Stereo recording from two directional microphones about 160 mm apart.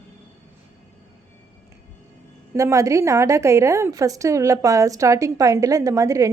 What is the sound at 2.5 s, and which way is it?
A woman's voice, 20° right (ahead or behind).